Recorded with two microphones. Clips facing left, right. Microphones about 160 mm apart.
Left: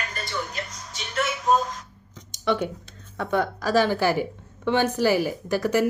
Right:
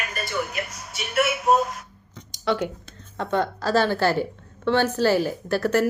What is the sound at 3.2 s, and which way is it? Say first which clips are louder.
A woman's voice: even; 10° left (ahead or behind).